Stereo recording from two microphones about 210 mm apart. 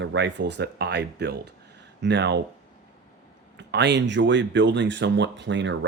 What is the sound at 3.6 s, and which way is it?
Speech, 55° right (ahead or behind).